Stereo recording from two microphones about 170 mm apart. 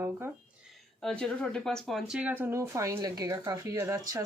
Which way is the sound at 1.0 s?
5° left (ahead or behind).